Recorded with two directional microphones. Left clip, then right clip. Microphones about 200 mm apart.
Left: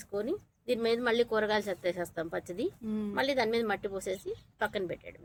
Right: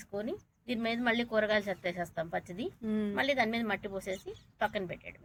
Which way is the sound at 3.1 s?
60° left (ahead or behind).